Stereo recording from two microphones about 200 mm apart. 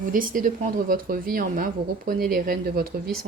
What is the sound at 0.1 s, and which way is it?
Speech, 40° right (ahead or behind).